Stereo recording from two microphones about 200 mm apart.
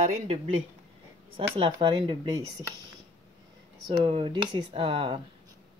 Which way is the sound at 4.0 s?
25° right (ahead or behind).